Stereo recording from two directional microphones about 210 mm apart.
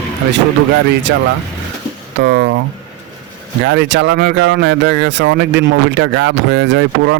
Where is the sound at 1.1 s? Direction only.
60° right (ahead or behind).